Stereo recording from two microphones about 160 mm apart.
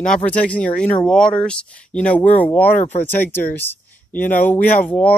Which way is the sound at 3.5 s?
15° left (ahead or behind).